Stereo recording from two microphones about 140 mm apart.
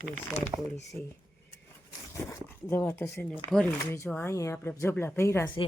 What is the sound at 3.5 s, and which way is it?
Speech, 5° left (ahead or behind).